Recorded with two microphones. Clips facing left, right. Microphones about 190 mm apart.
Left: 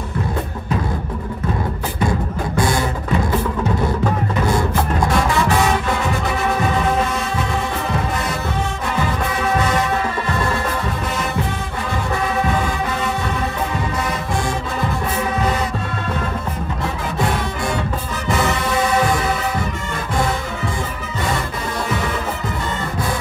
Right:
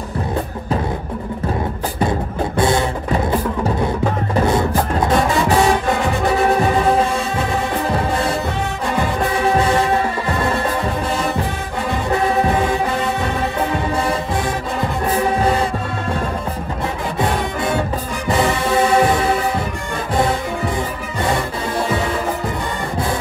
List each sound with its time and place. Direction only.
2.0 s music: 25° right (ahead or behind)
4.5 s music: 25° right (ahead or behind)
9.6 s music: 30° right (ahead or behind)
17.2 s music: 25° right (ahead or behind)